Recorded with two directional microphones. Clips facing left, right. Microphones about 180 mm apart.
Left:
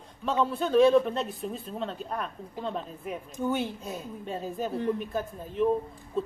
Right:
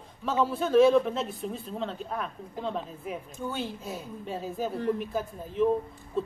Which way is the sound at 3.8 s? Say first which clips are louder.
Even; centre (ahead or behind).